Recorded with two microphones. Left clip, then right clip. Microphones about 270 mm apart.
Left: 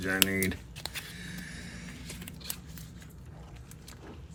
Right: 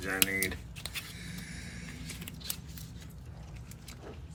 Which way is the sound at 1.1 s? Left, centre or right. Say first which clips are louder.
Left 2 dB; left.